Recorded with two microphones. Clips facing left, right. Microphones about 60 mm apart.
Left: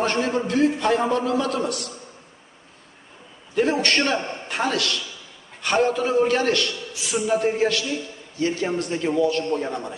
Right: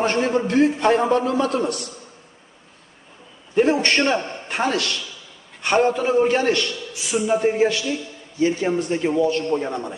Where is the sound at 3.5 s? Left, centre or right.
Right.